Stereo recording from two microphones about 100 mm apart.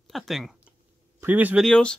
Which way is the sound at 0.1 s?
Centre (ahead or behind).